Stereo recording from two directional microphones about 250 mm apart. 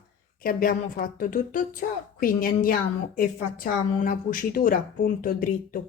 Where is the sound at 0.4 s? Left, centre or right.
Left.